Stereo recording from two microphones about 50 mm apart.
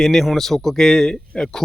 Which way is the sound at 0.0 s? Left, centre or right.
Centre.